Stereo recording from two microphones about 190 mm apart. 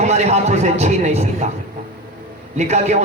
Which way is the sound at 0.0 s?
35° right (ahead or behind).